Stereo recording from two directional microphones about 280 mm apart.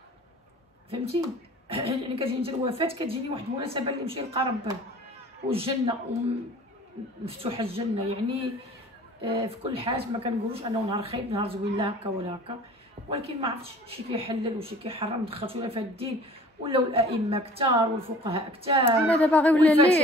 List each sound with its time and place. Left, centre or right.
0.8 s speech: centre
7.2 s speech: centre
13.8 s speech: centre
19.0 s speech: centre